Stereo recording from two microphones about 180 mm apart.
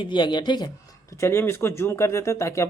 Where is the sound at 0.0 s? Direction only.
25° left (ahead or behind).